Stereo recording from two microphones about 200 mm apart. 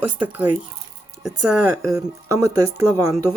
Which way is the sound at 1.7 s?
15° right (ahead or behind).